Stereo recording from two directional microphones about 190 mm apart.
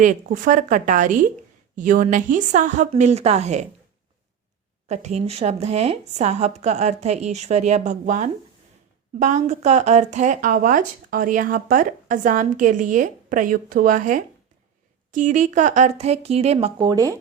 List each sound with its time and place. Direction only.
0.0 s a woman's voice: 45° right (ahead or behind)
4.9 s a woman's voice: 35° right (ahead or behind); by 17.2 s 20° right (ahead or behind)